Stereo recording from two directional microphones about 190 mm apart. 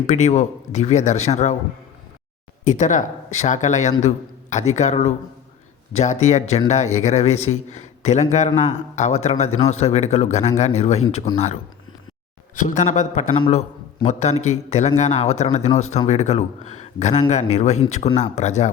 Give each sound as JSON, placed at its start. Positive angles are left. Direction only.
{"t": 0.1, "sound": "a man's voice", "side_deg": 35}
{"t": 2.6, "sound": "a man's voice", "side_deg": 40}